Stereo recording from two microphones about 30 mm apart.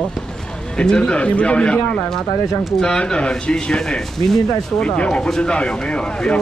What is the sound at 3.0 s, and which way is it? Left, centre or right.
Speech, left.